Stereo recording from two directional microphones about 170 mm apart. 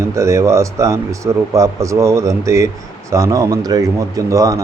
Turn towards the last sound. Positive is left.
turn(degrees=-20)  # may be behind; listen again after turning